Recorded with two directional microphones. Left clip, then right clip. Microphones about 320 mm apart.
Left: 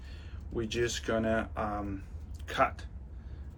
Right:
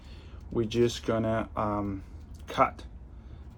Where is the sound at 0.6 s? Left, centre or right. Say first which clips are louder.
Right 5 dB; centre.